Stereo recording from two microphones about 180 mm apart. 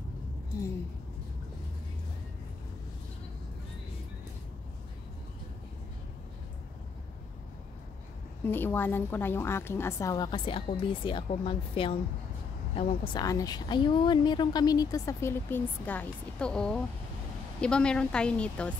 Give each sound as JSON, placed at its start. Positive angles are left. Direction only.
{"t": 8.5, "sound": "a woman's voice", "side_deg": 10}